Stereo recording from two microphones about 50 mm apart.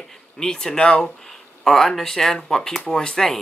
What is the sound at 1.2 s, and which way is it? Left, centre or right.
Speech, centre.